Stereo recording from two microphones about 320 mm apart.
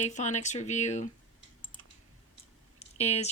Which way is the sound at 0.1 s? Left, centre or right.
Left.